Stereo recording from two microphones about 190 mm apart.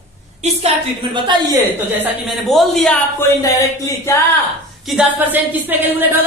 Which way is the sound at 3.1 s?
15° left (ahead or behind).